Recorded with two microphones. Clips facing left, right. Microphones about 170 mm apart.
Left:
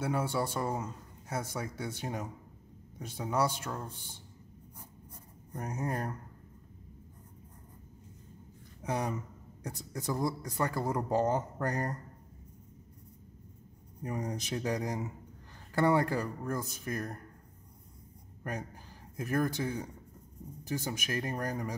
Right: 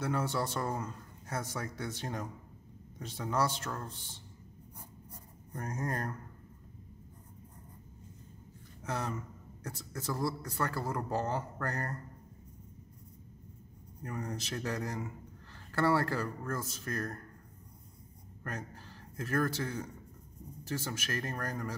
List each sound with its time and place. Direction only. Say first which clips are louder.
0.0 s a man's voice: left 1 dB; 10° left (ahead or behind)
5.5 s a man's voice: left 1 dB; 10° left (ahead or behind)
8.8 s a man's voice: left 3 dB; 15° left (ahead or behind)
14.0 s a man's voice: left 3 dB; 20° left (ahead or behind)
18.4 s a man's voice: left 3 dB; 15° left (ahead or behind)